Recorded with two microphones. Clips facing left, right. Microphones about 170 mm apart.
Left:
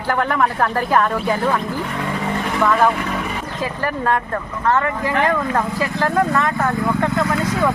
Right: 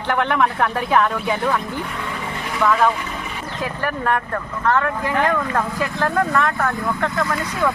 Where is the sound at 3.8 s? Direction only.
10° left (ahead or behind).